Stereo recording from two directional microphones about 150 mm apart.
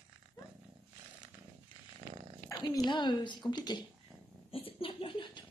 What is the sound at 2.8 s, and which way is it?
A woman's voice, 30° left (ahead or behind).